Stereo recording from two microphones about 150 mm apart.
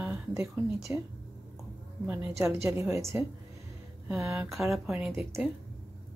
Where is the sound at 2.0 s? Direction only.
15° right (ahead or behind).